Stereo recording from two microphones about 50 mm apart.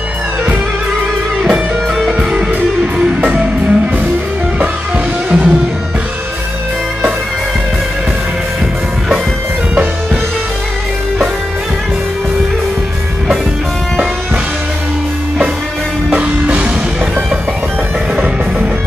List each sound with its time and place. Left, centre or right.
1.4 s music: centre
3.3 s music: right
16.1 s music: right